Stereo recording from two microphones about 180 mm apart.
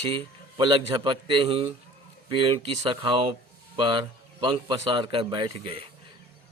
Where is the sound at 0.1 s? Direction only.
25° right (ahead or behind).